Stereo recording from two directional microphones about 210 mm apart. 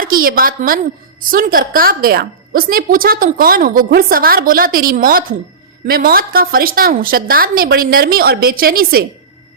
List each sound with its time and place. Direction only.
0.0 s a woman's voice: 45° right (ahead or behind)